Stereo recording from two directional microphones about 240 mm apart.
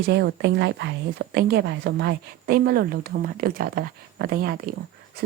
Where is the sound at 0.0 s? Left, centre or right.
Right.